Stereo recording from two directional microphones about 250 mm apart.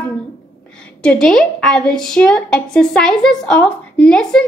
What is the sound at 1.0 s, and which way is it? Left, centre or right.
A woman's voice, centre.